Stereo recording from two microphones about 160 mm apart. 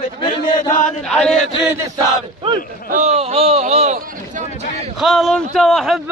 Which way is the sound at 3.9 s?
60° right (ahead or behind).